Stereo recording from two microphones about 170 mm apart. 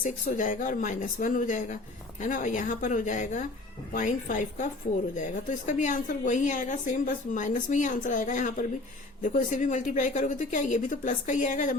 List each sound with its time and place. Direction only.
0.0 s a woman's voice: 50° left (ahead or behind)